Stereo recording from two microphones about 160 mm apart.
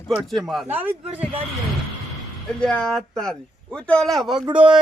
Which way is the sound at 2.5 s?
5° left (ahead or behind).